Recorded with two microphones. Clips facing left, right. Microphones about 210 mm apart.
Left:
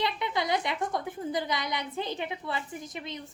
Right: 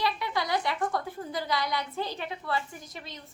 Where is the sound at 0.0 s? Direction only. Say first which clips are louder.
Even; 20° left (ahead or behind).